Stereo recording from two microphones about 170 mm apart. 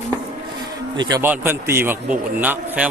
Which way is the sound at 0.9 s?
25° right (ahead or behind).